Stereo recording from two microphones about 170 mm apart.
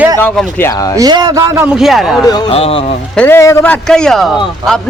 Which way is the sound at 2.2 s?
25° left (ahead or behind).